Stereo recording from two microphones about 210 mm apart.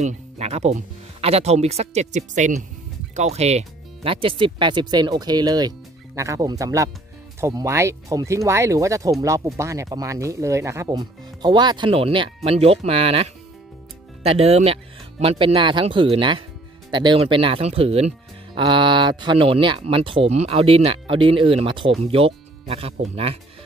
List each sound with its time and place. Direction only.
0.0 s speech: 30° right (ahead or behind)